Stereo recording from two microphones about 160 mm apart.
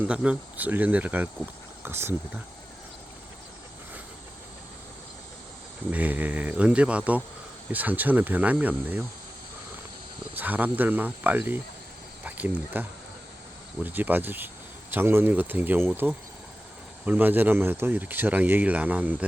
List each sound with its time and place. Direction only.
0.0 s speech: 5° right (ahead or behind)
5.9 s speech: 10° right (ahead or behind)
10.3 s speech: 10° right (ahead or behind)
13.8 s speech: 10° right (ahead or behind)